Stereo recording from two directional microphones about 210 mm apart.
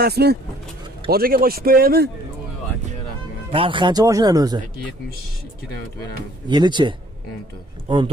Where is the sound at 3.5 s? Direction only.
25° right (ahead or behind).